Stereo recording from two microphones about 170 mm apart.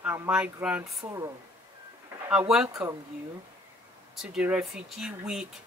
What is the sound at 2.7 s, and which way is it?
Speech, 15° right (ahead or behind).